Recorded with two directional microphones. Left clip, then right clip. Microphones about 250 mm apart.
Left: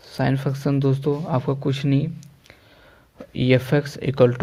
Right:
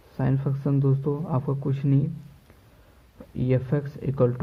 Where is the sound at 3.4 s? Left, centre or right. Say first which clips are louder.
Left 7 dB; left.